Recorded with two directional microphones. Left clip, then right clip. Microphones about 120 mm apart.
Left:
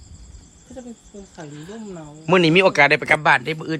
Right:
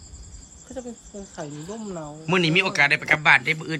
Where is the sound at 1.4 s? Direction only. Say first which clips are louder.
Right 2 dB; 45° right (ahead or behind).